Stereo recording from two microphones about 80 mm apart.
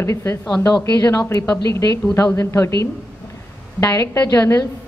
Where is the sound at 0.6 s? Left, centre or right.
Left.